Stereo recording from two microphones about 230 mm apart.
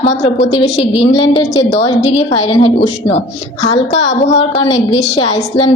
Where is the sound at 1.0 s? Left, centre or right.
Left.